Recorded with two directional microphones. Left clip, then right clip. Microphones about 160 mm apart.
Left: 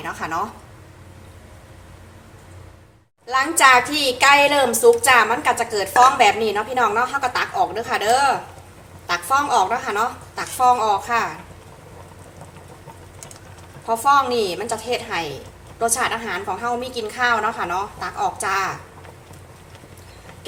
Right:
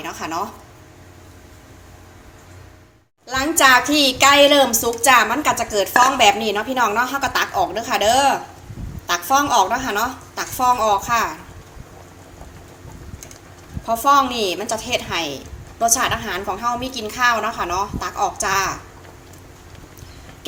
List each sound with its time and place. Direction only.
0.0 s speech: 15° right (ahead or behind)
3.2 s a woman's voice: 30° right (ahead or behind)
13.8 s a woman's voice: 35° right (ahead or behind)